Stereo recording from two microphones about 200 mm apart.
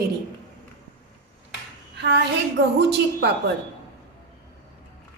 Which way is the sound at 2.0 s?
60° right (ahead or behind).